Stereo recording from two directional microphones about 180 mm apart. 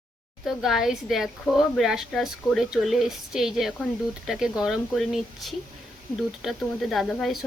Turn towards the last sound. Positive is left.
turn(degrees=0)  # may be behind; listen again after turning